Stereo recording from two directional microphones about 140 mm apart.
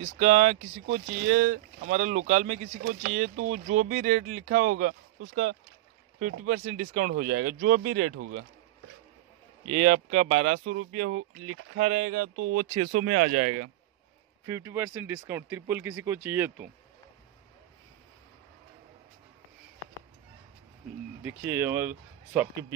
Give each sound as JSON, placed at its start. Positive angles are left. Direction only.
{"t": 0.0, "sound": "speech", "side_deg": -55}
{"t": 1.9, "sound": "speech", "side_deg": -60}
{"t": 3.0, "sound": "speech", "side_deg": -65}
{"t": 9.7, "sound": "speech", "side_deg": -45}
{"t": 14.4, "sound": "speech", "side_deg": -25}
{"t": 21.2, "sound": "speech", "side_deg": -15}